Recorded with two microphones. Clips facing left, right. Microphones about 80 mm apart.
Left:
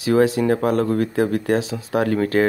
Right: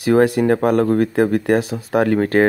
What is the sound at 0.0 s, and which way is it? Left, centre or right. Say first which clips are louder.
Speech: right 3 dB; right.